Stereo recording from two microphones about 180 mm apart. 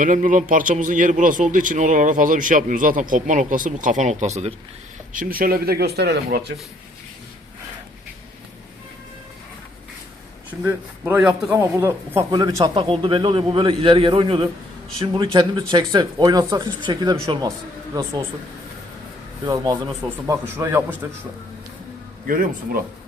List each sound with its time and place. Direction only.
0.0 s a man's voice: 45° right (ahead or behind)
5.1 s speech: 50° right (ahead or behind)
10.6 s a man's voice: 10° right (ahead or behind)
11.5 s a man's voice: 15° right (ahead or behind)
19.5 s a man's voice: 20° right (ahead or behind)
22.3 s a man's voice: 50° right (ahead or behind)